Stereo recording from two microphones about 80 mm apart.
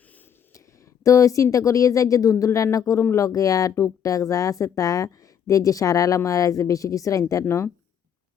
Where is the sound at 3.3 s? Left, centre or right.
Left.